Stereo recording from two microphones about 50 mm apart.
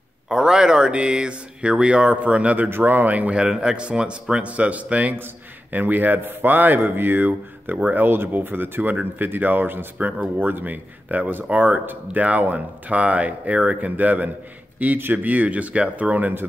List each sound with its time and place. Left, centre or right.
0.3 s speech: centre; by 2.7 s right
2.7 s speech: right
3.3 s speech: centre
5.2 s speech: right
15.2 s speech: right